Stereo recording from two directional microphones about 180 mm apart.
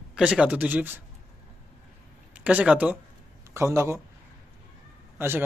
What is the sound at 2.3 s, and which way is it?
Speech, 5° right (ahead or behind).